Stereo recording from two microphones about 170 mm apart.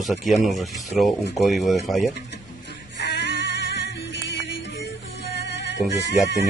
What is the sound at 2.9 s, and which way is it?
Music, 85° left.